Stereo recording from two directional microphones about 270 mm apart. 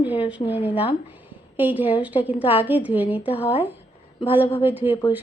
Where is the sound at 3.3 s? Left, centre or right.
Left.